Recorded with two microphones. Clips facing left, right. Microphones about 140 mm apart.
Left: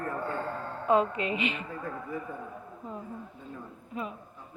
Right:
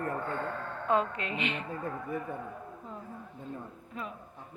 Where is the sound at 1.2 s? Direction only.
5° left (ahead or behind).